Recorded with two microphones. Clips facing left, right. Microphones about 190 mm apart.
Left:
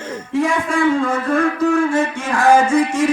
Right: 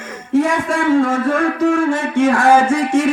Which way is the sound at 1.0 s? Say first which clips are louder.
Right 2 dB; 45° right (ahead or behind).